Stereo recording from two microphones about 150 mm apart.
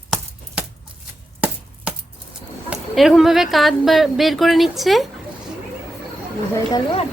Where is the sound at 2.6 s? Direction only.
Centre (ahead or behind).